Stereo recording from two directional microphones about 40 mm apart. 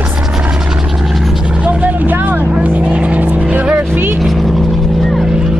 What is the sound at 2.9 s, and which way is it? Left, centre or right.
Vehicle, right.